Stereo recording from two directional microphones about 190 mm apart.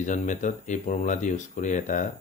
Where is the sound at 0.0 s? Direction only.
40° left (ahead or behind).